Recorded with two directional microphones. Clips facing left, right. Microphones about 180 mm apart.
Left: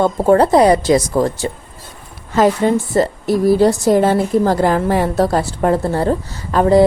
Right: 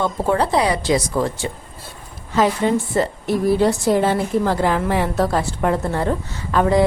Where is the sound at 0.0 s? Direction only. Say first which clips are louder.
Left 7 dB; 45° left (ahead or behind).